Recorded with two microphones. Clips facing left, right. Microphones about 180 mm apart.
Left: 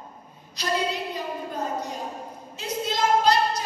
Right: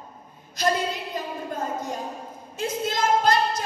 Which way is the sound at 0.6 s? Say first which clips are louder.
Right 6 dB; 50° right (ahead or behind).